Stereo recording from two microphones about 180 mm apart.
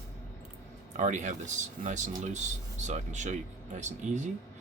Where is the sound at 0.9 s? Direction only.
40° right (ahead or behind).